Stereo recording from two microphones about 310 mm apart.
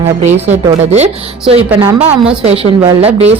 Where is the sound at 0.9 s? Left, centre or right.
Right.